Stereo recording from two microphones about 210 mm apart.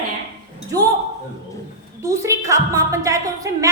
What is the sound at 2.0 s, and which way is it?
A woman's voice, 15° right (ahead or behind).